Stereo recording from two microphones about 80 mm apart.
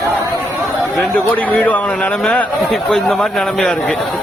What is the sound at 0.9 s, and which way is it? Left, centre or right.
A man's voice, centre.